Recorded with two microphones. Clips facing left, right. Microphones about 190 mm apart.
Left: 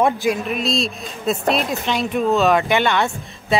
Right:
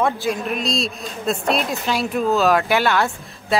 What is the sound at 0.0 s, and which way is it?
Speech, 15° left (ahead or behind).